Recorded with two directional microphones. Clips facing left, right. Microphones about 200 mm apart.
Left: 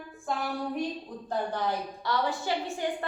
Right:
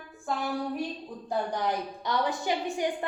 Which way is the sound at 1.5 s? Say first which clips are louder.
Right 1 dB; 15° right (ahead or behind).